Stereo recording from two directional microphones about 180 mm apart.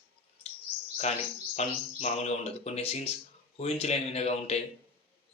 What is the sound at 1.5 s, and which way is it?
Speech, 40° left (ahead or behind).